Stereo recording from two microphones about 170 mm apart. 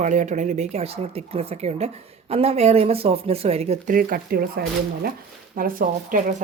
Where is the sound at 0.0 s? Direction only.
45° right (ahead or behind).